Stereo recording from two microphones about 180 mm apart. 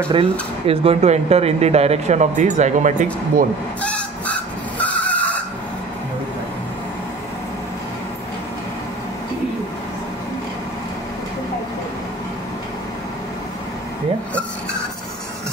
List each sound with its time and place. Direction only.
0.1 s speech: 30° right (ahead or behind)
3.8 s vehicle: 5° left (ahead or behind)